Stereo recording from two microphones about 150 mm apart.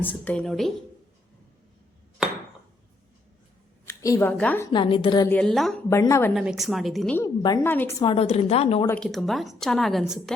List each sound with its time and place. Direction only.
0.0 s a woman's voice: 10° left (ahead or behind)
3.8 s a woman's voice: 20° left (ahead or behind)
4.7 s a woman's voice: 35° left (ahead or behind)
5.3 s speech: 5° left (ahead or behind)
5.9 s a woman's voice: 20° left (ahead or behind)
6.3 s speech: centre (ahead or behind)
7.6 s a woman's voice: 15° left (ahead or behind)
7.9 s a woman's voice: 35° left (ahead or behind)
9.0 s speech: centre (ahead or behind)